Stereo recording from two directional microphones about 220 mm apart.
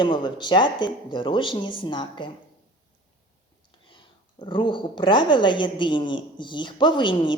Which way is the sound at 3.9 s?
20° left (ahead or behind).